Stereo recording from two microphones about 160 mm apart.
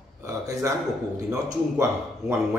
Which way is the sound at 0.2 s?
20° right (ahead or behind).